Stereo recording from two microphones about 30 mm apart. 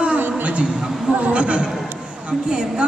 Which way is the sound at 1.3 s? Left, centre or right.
Right.